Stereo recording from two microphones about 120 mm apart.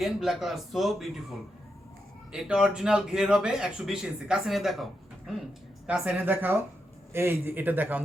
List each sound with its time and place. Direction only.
0.0 s speech: 5° right (ahead or behind)